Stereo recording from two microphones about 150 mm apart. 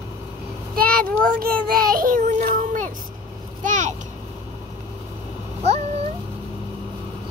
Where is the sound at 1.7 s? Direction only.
70° right (ahead or behind).